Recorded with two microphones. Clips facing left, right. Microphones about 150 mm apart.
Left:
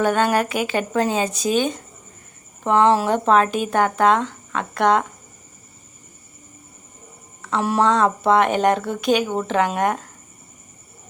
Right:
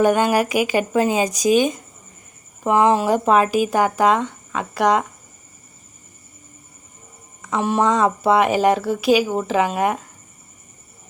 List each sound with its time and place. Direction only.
0.0 s speech: 15° right (ahead or behind)
7.6 s speech: centre (ahead or behind)